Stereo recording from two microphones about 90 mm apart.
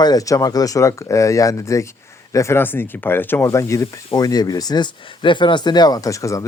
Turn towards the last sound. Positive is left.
turn(degrees=35)  # may be behind; listen again after turning